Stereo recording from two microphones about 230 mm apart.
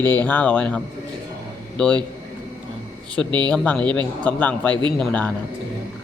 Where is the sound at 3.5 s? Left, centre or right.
Centre.